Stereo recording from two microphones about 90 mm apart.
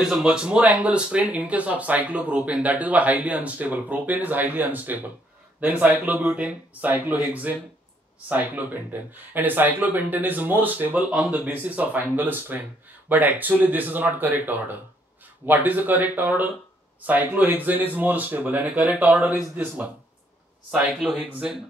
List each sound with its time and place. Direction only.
0.0 s speech: 5° right (ahead or behind)
20.7 s speech: 5° right (ahead or behind)